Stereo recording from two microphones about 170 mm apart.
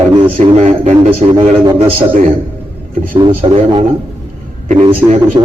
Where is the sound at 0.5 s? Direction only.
40° right (ahead or behind).